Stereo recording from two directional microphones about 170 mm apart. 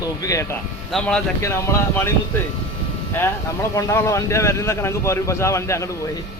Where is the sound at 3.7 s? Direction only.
15° left (ahead or behind).